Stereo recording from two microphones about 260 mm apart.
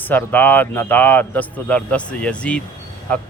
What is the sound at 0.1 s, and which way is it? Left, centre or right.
Speech, centre.